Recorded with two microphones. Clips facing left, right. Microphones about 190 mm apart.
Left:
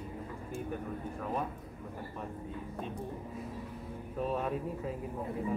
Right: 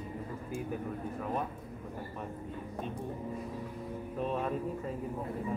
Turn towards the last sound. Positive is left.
turn(degrees=5)  # may be behind; listen again after turning